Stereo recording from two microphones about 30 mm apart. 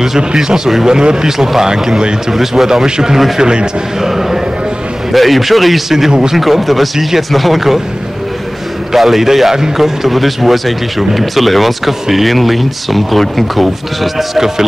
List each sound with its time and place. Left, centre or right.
0.8 s speech: right
2.3 s a man's voice: centre; by 3.6 s right
4.0 s speech: centre
5.1 s a man's voice: centre
5.9 s a man's voice: centre
8.9 s a man's voice: centre